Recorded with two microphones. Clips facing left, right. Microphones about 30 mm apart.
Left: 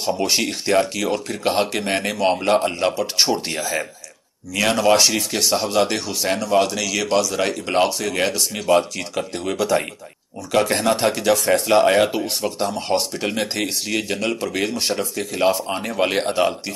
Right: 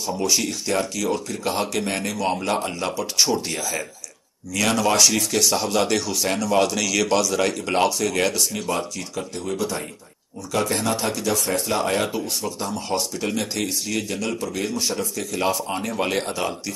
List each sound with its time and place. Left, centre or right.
0.0 s a man's voice: left; by 6.5 s centre
6.5 s speech: centre
8.5 s speech: left
8.9 s speech: left
9.6 s speech: left
10.5 s speech: left
15.1 s a man's voice: left